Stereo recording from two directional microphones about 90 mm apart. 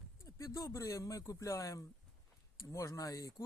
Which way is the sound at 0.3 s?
35° left (ahead or behind).